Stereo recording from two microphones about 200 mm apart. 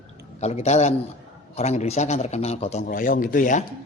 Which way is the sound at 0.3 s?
35° left (ahead or behind).